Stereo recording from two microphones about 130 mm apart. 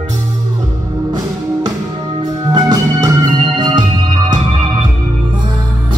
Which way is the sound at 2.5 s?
30° right (ahead or behind).